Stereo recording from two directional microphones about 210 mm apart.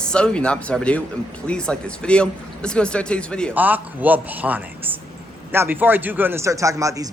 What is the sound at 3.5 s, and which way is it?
A man's voice, 10° right (ahead or behind).